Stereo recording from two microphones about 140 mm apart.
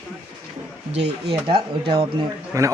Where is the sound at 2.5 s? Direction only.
25° right (ahead or behind).